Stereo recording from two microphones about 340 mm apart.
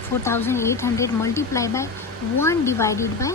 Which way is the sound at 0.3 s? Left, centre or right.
Centre.